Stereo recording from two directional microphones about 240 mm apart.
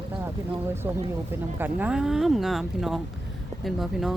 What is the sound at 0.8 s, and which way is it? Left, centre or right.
Speech, centre.